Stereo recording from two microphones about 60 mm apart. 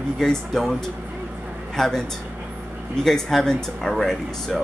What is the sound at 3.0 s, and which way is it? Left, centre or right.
Speech, centre.